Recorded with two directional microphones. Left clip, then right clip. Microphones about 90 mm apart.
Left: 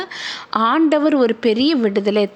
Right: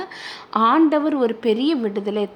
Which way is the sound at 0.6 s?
45° left (ahead or behind).